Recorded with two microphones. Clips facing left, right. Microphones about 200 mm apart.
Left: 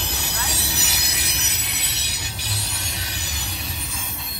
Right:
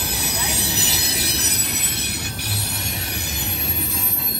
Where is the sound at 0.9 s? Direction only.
30° right (ahead or behind).